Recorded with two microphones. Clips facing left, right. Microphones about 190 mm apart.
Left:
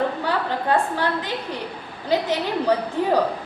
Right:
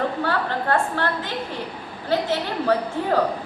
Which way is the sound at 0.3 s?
15° left (ahead or behind).